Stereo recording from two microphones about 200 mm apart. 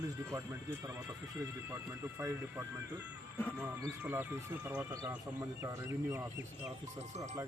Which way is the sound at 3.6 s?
15° right (ahead or behind).